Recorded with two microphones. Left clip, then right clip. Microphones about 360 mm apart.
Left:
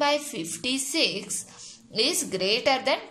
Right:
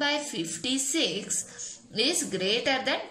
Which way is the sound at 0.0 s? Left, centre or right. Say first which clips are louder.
Left 3 dB; centre.